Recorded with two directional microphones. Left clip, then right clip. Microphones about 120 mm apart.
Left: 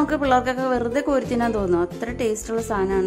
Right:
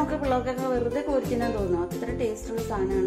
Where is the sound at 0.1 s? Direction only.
55° left (ahead or behind).